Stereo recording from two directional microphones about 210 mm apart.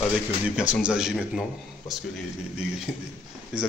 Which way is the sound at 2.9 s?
5° left (ahead or behind).